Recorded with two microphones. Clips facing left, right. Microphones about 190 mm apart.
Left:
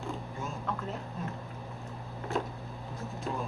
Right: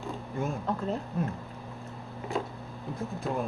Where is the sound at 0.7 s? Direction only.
35° right (ahead or behind).